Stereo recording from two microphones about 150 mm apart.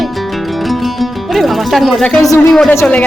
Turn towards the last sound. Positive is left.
turn(degrees=15)  # may be behind; listen again after turning